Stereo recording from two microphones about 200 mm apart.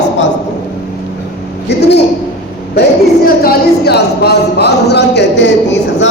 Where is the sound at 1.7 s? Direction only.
55° left (ahead or behind).